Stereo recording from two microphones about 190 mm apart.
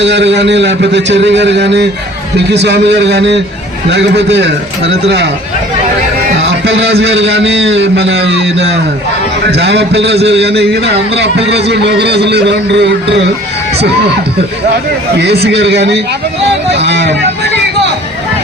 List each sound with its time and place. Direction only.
0.0 s a man's voice: 65° right (ahead or behind)
6.7 s a man's voice: 65° right (ahead or behind)
15.2 s a man's voice: 60° right (ahead or behind)